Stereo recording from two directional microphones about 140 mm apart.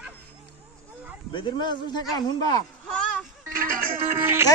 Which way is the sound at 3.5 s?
90° right.